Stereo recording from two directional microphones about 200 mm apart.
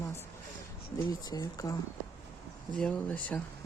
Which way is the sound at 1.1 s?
20° left (ahead or behind).